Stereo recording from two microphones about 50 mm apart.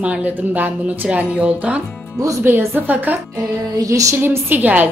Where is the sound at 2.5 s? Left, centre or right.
Right.